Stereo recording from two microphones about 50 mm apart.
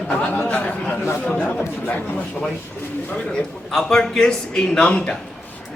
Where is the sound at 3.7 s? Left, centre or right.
Centre.